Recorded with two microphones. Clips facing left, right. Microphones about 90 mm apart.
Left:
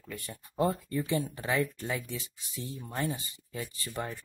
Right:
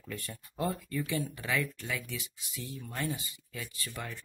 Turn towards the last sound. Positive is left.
turn(degrees=30)  # may be behind; listen again after turning